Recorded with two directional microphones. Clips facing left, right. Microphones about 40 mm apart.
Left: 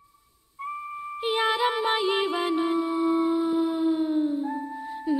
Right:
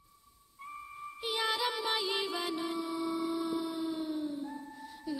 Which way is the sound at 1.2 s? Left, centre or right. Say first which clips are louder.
Left 9 dB; left.